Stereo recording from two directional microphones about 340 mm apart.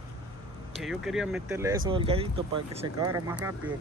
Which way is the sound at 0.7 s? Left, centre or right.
Centre.